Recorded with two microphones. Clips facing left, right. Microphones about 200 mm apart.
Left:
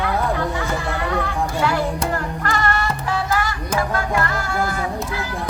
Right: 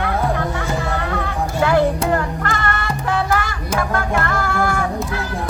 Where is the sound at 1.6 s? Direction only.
55° right (ahead or behind).